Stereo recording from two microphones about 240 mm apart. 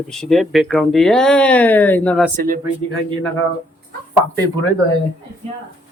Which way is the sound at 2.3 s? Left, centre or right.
Right.